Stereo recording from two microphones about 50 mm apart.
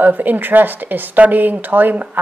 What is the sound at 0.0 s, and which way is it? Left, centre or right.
A woman's voice, right.